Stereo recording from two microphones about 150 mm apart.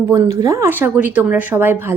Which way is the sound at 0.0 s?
20° right (ahead or behind).